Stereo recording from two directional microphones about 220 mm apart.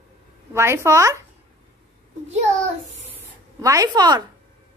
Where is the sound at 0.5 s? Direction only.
10° right (ahead or behind).